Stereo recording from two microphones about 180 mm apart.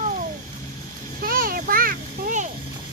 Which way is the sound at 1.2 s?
55° right (ahead or behind).